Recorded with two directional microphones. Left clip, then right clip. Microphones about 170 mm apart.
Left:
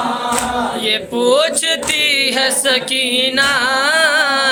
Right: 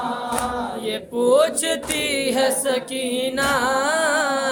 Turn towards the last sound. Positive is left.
turn(degrees=-20)  # may be behind; listen again after turning